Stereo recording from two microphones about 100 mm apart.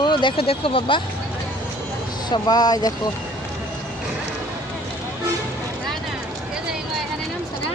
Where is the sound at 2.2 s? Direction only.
45° left (ahead or behind).